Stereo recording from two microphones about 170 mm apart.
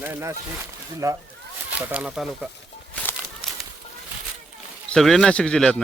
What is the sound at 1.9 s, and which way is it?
Speech, 5° right (ahead or behind).